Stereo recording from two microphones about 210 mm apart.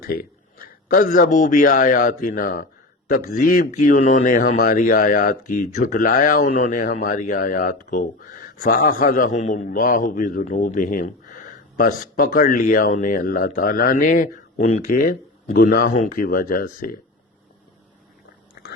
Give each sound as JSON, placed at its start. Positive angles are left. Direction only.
{"t": 0.0, "sound": "a man's voice", "side_deg": 45}
{"t": 18.6, "sound": "biting", "side_deg": 50}